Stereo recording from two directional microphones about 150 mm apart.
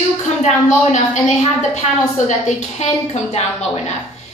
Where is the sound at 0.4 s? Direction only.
55° left (ahead or behind).